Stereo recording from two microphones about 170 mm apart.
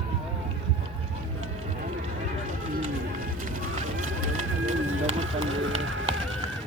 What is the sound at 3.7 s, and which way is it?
Run, 45° right (ahead or behind).